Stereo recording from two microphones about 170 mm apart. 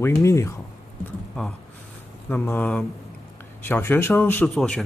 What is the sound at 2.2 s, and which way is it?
A man's voice, 10° left (ahead or behind).